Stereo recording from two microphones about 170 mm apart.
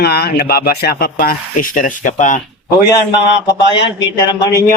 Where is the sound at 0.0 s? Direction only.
70° left (ahead or behind); by 2.4 s 45° left (ahead or behind).